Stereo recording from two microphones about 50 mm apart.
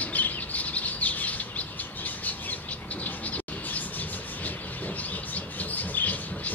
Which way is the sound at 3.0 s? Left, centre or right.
Left.